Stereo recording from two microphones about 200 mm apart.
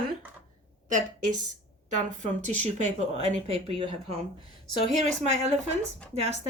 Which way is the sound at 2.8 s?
35° right (ahead or behind).